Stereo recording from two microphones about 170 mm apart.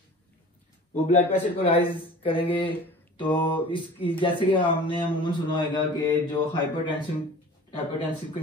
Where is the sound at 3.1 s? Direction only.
30° left (ahead or behind).